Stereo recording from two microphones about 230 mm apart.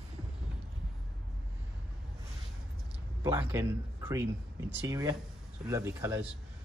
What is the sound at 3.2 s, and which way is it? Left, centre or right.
A man's voice, centre.